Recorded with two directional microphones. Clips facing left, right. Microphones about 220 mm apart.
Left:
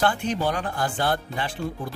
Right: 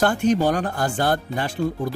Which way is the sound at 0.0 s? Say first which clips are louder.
Right 5 dB; 45° right (ahead or behind).